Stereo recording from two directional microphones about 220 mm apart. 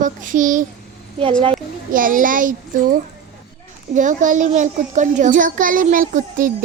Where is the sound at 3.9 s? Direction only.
35° right (ahead or behind).